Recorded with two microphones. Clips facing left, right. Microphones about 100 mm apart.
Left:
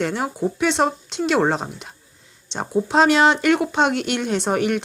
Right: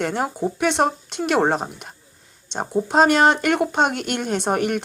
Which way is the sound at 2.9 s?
50° right (ahead or behind).